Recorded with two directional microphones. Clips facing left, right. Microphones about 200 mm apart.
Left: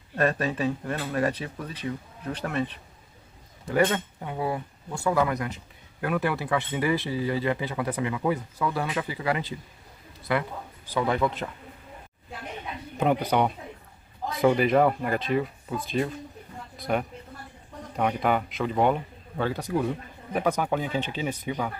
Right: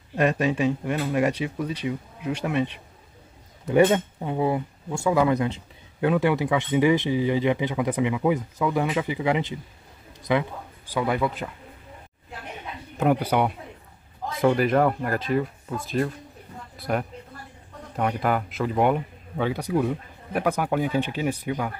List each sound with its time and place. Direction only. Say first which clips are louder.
0.1 s speech: right 3 dB; 15° right (ahead or behind)
10.9 s speech: right 1 dB; 10° right (ahead or behind)
13.0 s speech: right 2 dB; 5° right (ahead or behind)